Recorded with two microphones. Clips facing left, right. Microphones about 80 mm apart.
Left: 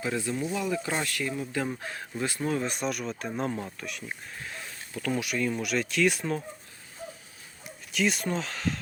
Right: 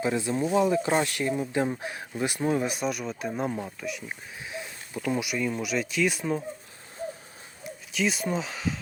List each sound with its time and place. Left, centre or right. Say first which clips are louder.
0.0 s speech: right 4 dB; right
2.7 s speech: right 1 dB; centre
4.4 s a sound: right 6 dB; centre
5.2 s speech: even; centre
7.9 s speech: even; centre